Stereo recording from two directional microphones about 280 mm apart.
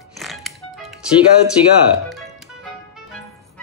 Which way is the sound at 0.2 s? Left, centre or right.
Centre.